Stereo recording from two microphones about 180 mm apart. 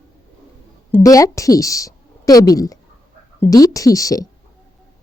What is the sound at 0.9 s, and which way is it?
A woman's voice, 20° left (ahead or behind).